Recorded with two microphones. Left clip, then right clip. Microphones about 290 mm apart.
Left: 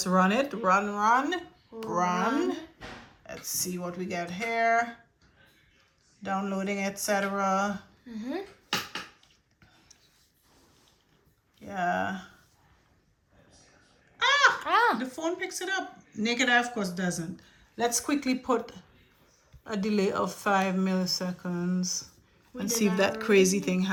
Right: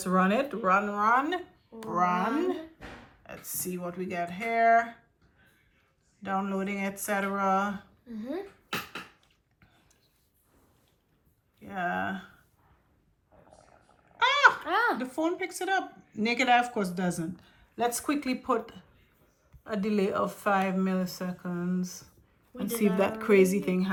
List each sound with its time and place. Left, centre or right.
0.0 s speech: centre
6.2 s speech: centre
8.1 s speech: left
11.6 s speech: centre
14.2 s babbling: centre
14.6 s a sound: left
15.0 s speech: centre